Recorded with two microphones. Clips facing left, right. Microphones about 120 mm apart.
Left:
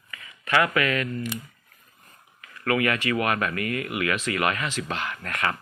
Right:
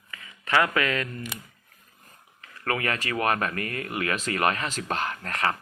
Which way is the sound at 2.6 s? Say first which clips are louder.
Left 4 dB; 35° right (ahead or behind).